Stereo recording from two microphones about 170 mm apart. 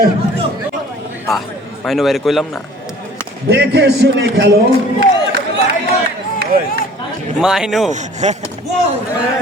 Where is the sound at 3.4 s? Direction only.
75° right (ahead or behind).